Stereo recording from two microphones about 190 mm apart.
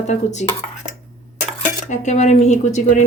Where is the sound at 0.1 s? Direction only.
40° left (ahead or behind).